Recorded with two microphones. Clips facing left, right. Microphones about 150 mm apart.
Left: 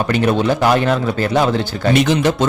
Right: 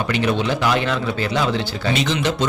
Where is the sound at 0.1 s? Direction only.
45° left (ahead or behind).